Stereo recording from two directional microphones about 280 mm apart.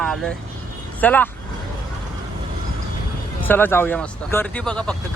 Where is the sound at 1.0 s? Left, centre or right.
Centre.